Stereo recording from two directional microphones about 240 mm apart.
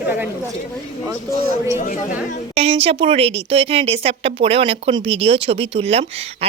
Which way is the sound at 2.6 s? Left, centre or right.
Right.